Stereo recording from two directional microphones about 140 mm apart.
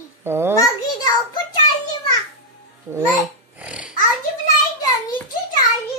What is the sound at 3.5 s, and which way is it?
Snoring, 10° right (ahead or behind).